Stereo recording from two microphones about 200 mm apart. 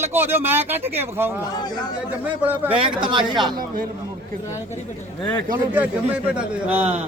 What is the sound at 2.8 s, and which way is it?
Speech, 25° right (ahead or behind).